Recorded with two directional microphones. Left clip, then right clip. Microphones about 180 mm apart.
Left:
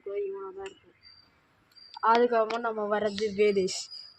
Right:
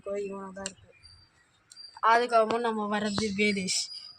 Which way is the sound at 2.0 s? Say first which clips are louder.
Even; 25° left (ahead or behind).